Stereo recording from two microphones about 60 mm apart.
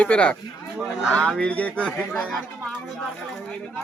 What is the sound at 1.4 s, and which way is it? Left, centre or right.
Speech, left.